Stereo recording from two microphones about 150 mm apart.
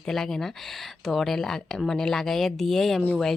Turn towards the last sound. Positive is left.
turn(degrees=0)  # may be behind; listen again after turning